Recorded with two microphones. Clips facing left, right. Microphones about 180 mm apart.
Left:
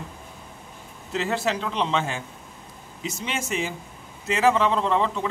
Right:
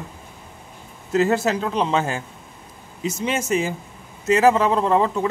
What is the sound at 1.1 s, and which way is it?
A man's voice, 45° right (ahead or behind).